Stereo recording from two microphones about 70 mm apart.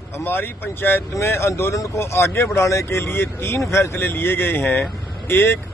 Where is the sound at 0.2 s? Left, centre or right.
Left.